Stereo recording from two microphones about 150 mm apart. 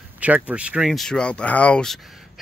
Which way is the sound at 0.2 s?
10° right (ahead or behind).